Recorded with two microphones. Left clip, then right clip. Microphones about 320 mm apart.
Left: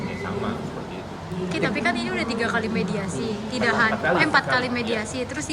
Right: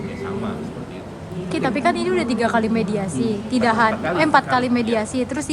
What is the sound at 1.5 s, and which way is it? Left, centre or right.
Speech, centre.